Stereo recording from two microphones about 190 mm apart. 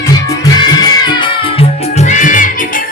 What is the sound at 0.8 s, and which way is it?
Music, 25° left (ahead or behind).